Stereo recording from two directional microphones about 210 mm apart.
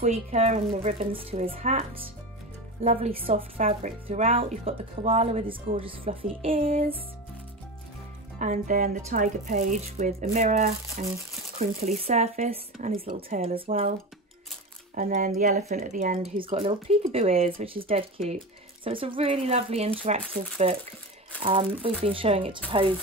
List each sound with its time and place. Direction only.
0.0 s speech: 30° right (ahead or behind)
8.4 s speech: 35° right (ahead or behind)
15.0 s speech: 40° right (ahead or behind)
16.5 s speech: 25° right (ahead or behind)